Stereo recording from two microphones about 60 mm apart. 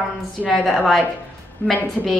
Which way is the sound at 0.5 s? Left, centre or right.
Centre.